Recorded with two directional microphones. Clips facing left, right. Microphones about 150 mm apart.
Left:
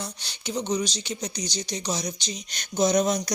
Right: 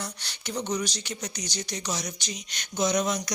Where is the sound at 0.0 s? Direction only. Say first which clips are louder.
Left 2 dB; 20° left (ahead or behind).